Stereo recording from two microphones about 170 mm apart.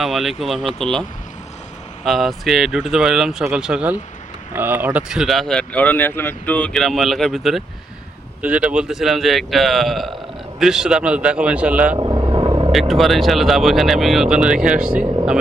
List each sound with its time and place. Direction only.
0.0 s speech: centre (ahead or behind)
2.0 s a man's voice: centre (ahead or behind)
11.9 s vehicle: 25° right (ahead or behind)
12.9 s speech: centre (ahead or behind)